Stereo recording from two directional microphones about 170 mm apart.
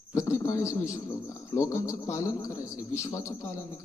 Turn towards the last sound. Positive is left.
turn(degrees=15)  # may be behind; listen again after turning